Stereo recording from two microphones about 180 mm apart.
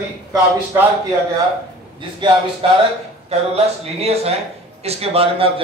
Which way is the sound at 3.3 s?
35° right (ahead or behind).